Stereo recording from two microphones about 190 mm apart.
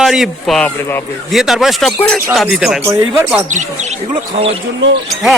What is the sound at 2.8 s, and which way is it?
Speech, 15° right (ahead or behind).